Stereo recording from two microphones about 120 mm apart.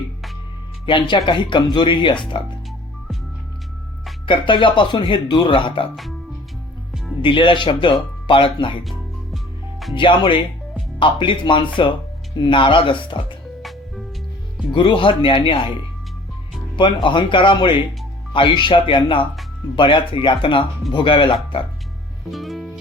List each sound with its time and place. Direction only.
0.9 s speech: 40° left (ahead or behind)
4.3 s speech: 45° left (ahead or behind)
6.9 s music: 5° left (ahead or behind)
7.2 s speech: 45° left (ahead or behind)
8.8 s music: centre (ahead or behind)
9.9 s speech: 45° left (ahead or behind)
13.6 s music: centre (ahead or behind)
14.7 s speech: 40° left (ahead or behind)
16.7 s speech: 45° left (ahead or behind)
22.3 s music: centre (ahead or behind)